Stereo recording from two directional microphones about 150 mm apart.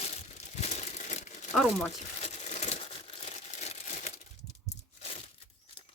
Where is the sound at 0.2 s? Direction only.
50° left (ahead or behind).